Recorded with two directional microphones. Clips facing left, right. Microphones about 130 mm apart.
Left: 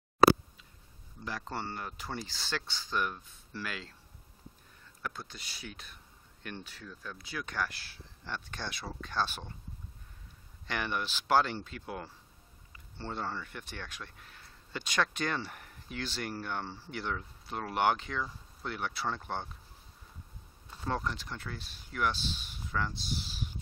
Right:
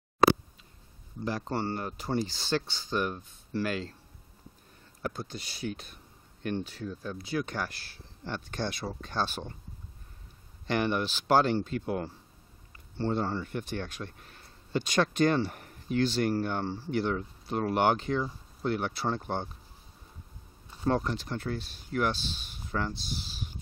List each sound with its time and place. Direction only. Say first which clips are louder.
1.2 s speech: right 7 dB; 40° right (ahead or behind)
2.3 s speech: right 7 dB; 25° right (ahead or behind)
3.0 s speech: right 2 dB; 35° right (ahead or behind)
5.0 s speech: right 6 dB; 35° right (ahead or behind)
10.7 s speech: right 7 dB; 35° right (ahead or behind)
20.8 s speech: right 6 dB; 40° right (ahead or behind)